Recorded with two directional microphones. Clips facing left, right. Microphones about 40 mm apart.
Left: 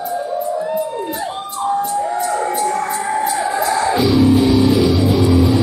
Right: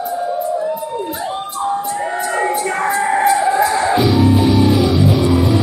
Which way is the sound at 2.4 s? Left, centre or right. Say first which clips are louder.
Right 1 dB; right.